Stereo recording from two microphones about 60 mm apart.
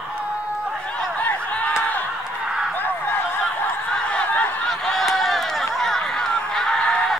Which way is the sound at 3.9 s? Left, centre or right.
Left.